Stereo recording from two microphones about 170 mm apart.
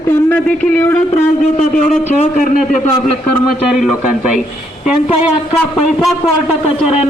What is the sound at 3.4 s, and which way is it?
Speech, centre (ahead or behind).